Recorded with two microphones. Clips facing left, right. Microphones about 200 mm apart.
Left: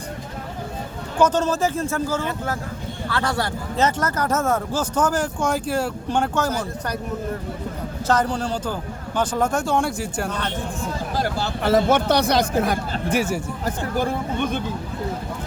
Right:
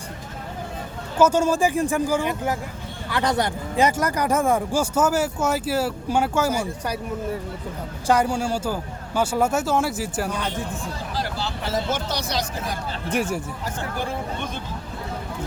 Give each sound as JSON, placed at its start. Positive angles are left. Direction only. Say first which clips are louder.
{"t": 1.2, "sound": "speech", "louder": "right 1 dB", "side_deg": -10}
{"t": 8.0, "sound": "speech", "louder": "right 1 dB", "side_deg": -10}
{"t": 11.1, "sound": "speech", "louder": "left 4 dB", "side_deg": 50}
{"t": 13.1, "sound": "speech", "louder": "left 2 dB", "side_deg": 5}
{"t": 13.7, "sound": "speech", "louder": "left 6 dB", "side_deg": 50}